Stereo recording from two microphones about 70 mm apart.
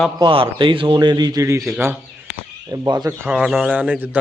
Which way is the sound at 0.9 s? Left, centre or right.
Right.